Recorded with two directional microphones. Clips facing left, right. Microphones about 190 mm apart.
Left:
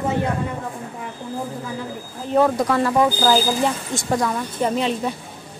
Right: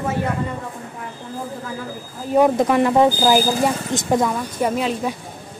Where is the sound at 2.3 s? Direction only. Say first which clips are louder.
Right 2 dB; 20° right (ahead or behind).